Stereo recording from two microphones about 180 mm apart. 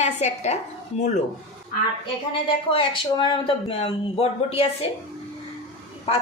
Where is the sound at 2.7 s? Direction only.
30° left (ahead or behind).